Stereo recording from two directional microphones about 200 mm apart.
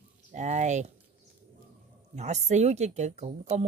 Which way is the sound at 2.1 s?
35° right (ahead or behind).